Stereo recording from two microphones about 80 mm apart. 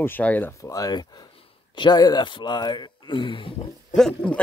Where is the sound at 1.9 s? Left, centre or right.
Left.